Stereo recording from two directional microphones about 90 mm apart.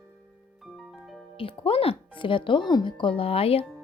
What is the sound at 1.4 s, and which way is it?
Speech, 90° left.